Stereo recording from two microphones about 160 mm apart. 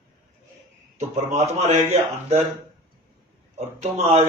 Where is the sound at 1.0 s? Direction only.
45° right (ahead or behind).